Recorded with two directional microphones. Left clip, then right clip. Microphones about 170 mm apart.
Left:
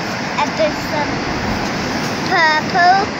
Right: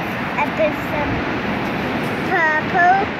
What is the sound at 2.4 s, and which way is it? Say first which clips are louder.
Child singing: left 3 dB; 20° right (ahead or behind).